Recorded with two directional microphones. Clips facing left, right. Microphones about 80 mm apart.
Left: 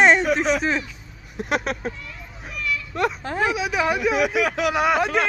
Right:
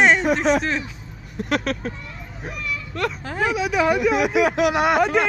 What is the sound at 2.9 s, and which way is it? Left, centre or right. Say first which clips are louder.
Speech: left 2 dB; centre.